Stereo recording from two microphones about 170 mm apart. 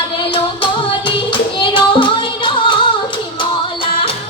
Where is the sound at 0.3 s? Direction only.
30° left (ahead or behind).